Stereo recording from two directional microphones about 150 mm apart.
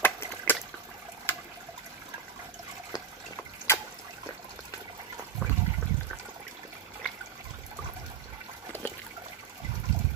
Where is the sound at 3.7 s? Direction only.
15° left (ahead or behind).